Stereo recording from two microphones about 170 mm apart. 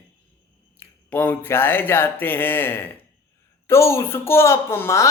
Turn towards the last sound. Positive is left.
turn(degrees=15)  # may be behind; listen again after turning